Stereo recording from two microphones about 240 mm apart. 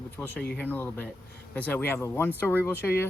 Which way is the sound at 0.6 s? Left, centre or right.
Centre.